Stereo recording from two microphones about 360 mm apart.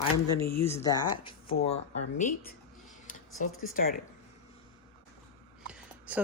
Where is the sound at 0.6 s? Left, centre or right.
Centre.